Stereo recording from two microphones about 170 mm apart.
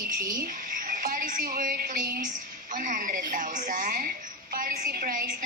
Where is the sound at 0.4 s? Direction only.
55° right (ahead or behind).